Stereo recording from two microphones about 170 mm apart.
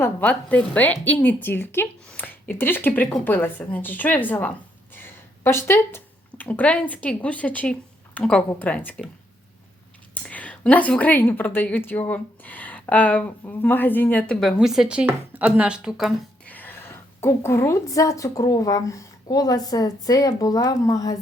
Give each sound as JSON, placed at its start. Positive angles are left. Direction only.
{"t": 0.0, "sound": "a woman's voice", "side_deg": 10}
{"t": 10.2, "sound": "a woman's voice", "side_deg": 10}
{"t": 14.6, "sound": "speech", "side_deg": -5}
{"t": 16.5, "sound": "a woman's voice", "side_deg": 10}